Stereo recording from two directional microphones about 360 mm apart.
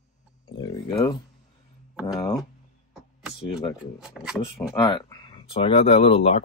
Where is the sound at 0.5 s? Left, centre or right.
Centre.